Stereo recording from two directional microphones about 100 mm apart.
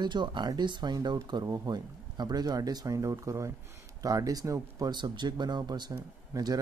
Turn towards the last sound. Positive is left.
turn(degrees=-35)  # may be behind; listen again after turning